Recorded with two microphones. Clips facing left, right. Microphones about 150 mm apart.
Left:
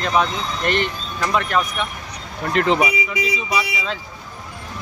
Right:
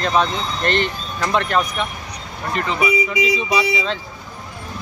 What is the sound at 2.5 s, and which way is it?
Speech, 90° left.